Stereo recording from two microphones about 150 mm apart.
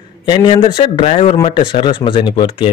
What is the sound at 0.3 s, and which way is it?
Speech, 35° left (ahead or behind).